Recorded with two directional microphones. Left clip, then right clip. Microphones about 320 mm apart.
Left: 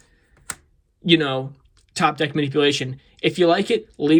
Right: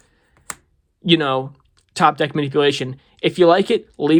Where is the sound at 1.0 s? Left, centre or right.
Centre.